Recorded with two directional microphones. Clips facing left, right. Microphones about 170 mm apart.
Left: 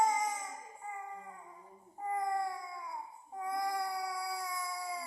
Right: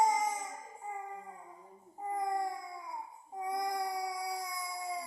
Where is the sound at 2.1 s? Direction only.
20° right (ahead or behind).